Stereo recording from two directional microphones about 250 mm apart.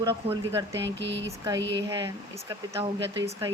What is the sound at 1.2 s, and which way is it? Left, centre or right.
Speech, centre.